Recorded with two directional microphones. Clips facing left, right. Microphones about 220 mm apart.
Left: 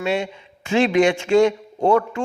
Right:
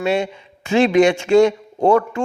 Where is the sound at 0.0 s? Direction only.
40° right (ahead or behind).